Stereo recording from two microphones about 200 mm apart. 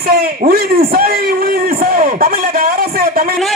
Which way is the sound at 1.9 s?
45° right (ahead or behind).